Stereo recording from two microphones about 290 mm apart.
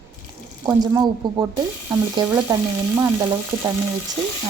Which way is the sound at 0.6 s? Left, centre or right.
Centre.